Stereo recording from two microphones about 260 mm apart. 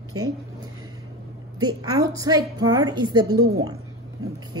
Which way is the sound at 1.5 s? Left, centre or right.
Centre.